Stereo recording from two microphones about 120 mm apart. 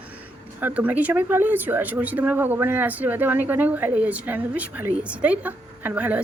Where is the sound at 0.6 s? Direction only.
15° right (ahead or behind).